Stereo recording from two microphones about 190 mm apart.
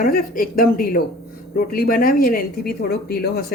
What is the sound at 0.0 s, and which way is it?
Speech, 50° left (ahead or behind).